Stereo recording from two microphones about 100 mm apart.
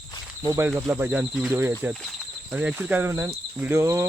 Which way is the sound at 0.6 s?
20° right (ahead or behind).